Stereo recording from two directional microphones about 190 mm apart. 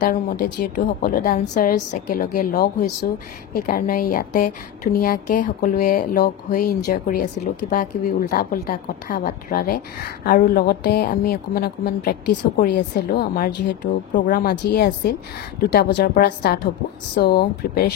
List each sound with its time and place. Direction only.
0.7 s a woman's voice: 45° left (ahead or behind)
14.1 s a woman's voice: 45° left (ahead or behind)